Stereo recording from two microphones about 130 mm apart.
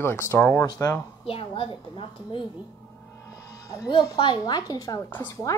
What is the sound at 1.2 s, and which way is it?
A woman's voice, 45° left (ahead or behind).